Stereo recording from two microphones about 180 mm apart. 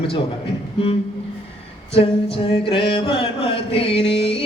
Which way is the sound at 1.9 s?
30° left (ahead or behind).